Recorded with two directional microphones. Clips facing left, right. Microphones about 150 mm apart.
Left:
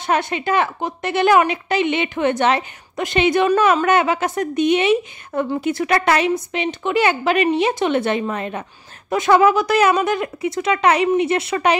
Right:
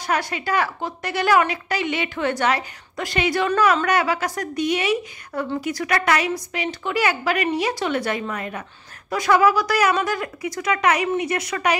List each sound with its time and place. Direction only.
0.0 s a woman's voice: 25° left (ahead or behind)